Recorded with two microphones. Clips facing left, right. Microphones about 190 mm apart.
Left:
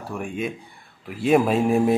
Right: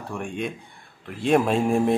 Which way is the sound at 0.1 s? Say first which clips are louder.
Left 2 dB; 5° left (ahead or behind).